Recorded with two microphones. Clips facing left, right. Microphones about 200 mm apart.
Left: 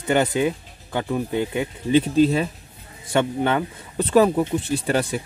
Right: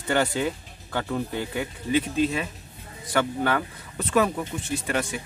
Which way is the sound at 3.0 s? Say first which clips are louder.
Left 4 dB; 25° left (ahead or behind).